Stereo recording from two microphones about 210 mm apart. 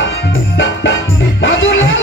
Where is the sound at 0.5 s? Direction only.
65° left (ahead or behind).